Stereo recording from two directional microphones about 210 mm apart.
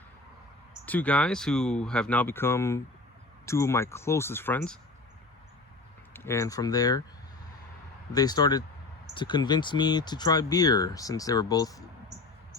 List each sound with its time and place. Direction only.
0.9 s speech: 5° left (ahead or behind)
6.1 s speech: 15° left (ahead or behind)
8.1 s speech: 20° left (ahead or behind)